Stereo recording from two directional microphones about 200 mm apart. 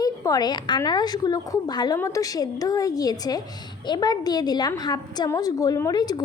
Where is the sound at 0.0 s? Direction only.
20° left (ahead or behind).